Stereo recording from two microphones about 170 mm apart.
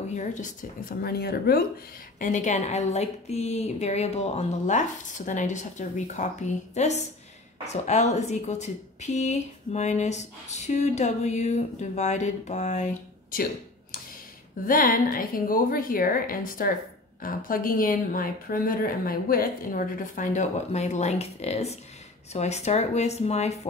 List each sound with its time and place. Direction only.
0.1 s a woman's voice: 45° left (ahead or behind); by 1.6 s 70° left (ahead or behind)
2.1 s a woman's voice: 50° left (ahead or behind)
14.6 s a woman's voice: 55° left (ahead or behind)